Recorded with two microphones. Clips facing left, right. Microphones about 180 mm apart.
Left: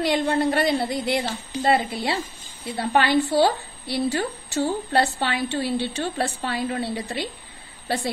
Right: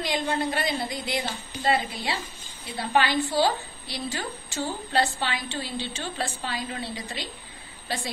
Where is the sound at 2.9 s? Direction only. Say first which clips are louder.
Left 4 dB; 55° left (ahead or behind).